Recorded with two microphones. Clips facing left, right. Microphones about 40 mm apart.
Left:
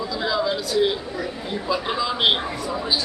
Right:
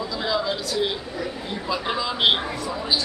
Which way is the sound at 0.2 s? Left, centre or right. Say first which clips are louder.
Left 2 dB; centre.